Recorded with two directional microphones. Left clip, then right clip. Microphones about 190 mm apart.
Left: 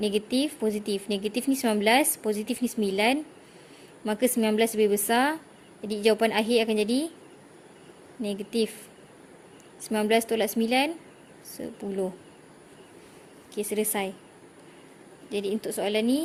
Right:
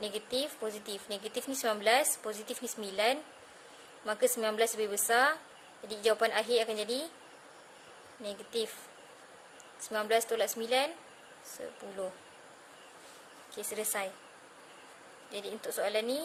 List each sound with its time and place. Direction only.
0.0 s speech: 30° left (ahead or behind)
8.2 s speech: 30° left (ahead or behind)
9.9 s speech: 25° left (ahead or behind)
13.6 s speech: 25° left (ahead or behind)
15.3 s speech: 25° left (ahead or behind)